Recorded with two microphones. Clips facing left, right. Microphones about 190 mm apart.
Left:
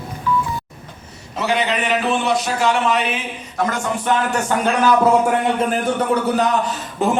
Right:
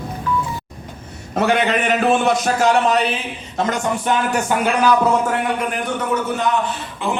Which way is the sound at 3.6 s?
25° right (ahead or behind).